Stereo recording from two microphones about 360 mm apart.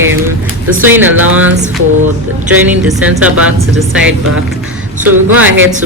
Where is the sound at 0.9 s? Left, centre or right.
Centre.